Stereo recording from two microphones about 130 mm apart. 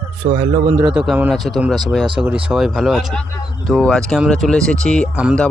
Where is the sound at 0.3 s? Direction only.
55° right (ahead or behind).